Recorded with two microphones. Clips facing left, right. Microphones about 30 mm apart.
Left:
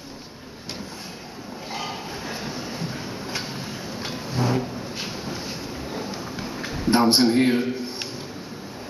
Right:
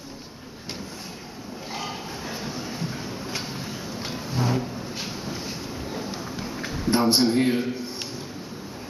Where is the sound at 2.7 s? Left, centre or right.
Centre.